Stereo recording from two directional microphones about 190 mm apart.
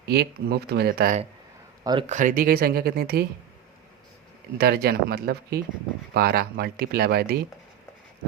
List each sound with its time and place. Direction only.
0.0 s speech: 55° right (ahead or behind)
1.8 s speech: 20° right (ahead or behind)
2.0 s speech: 40° right (ahead or behind)
4.5 s speech: 55° right (ahead or behind)